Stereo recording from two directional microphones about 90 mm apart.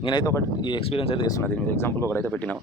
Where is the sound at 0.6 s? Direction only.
75° left (ahead or behind).